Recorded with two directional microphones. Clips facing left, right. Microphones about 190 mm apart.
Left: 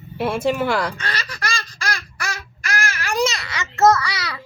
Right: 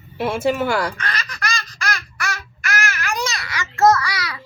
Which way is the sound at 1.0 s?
30° left (ahead or behind).